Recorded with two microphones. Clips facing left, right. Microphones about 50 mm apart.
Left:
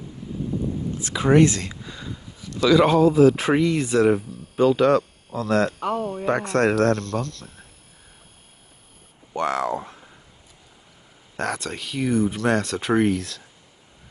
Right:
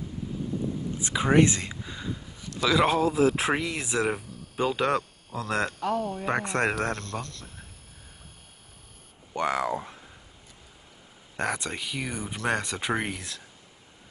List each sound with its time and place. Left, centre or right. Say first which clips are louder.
0.9 s speech: left 4 dB; centre
1.8 s a sound: even; centre
2.6 s speech: left 7 dB; centre
5.8 s speech: left 3 dB; left
6.2 s speech: left 8 dB; centre
9.3 s speech: left 3 dB; centre
11.3 s speech: left 2 dB; centre